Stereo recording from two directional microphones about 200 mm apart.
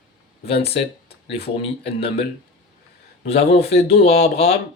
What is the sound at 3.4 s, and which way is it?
Speech, 30° left (ahead or behind).